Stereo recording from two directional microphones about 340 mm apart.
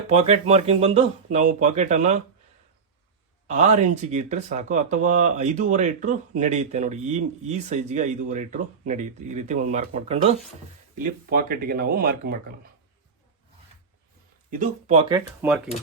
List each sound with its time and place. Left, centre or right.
0.1 s speech: centre
3.4 s speech: centre
14.5 s speech: right
15.4 s speech: centre